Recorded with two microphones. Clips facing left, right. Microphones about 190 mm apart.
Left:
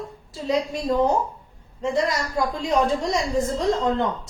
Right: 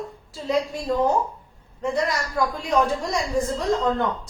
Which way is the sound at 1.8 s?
25° left (ahead or behind).